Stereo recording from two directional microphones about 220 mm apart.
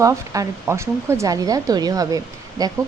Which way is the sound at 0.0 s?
15° right (ahead or behind).